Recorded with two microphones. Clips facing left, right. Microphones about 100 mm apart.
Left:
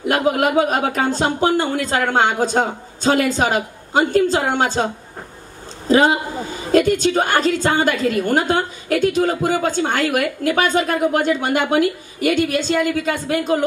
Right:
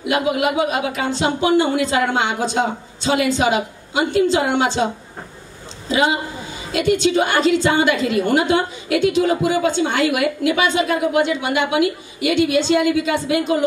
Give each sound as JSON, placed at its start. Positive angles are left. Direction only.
{"t": 0.0, "sound": "a woman's voice", "side_deg": 45}
{"t": 5.9, "sound": "a woman's voice", "side_deg": 45}